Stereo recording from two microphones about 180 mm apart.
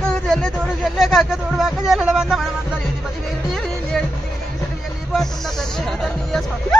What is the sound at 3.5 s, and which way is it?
Music, centre (ahead or behind).